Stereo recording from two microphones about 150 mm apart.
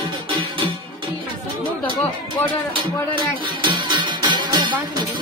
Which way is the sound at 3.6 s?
30° right (ahead or behind).